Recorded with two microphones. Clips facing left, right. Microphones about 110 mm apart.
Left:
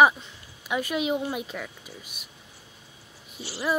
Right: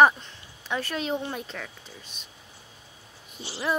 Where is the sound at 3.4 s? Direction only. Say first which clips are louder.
Left 1 dB; 25° right (ahead or behind).